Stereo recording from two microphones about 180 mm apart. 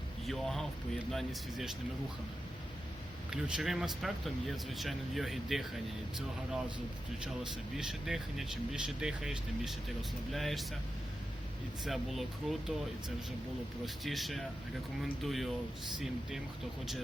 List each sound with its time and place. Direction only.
0.3 s speech: centre (ahead or behind)
3.2 s speech: 5° right (ahead or behind)
7.8 s speech: centre (ahead or behind)
11.9 s speech: centre (ahead or behind)
13.8 s speech: centre (ahead or behind)